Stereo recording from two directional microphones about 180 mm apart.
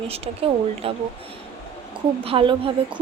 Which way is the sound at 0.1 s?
35° right (ahead or behind).